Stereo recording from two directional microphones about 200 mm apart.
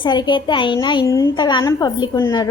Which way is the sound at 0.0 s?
20° left (ahead or behind).